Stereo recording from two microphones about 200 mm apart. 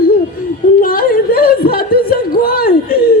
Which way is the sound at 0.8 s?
45° left (ahead or behind).